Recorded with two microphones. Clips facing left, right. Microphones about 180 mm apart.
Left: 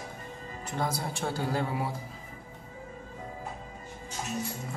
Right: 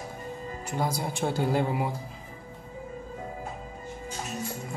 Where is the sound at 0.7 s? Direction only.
10° right (ahead or behind).